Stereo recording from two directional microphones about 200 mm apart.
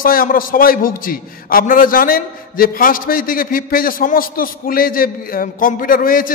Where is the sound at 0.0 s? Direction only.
45° left (ahead or behind).